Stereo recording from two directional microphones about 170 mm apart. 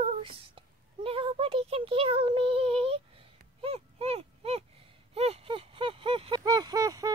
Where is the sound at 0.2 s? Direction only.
30° right (ahead or behind).